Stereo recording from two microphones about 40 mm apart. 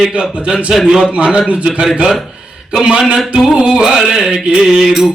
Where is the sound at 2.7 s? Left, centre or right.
Centre.